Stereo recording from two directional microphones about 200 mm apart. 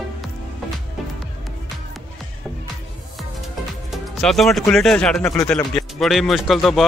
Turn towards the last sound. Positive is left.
turn(degrees=0)  # may be behind; listen again after turning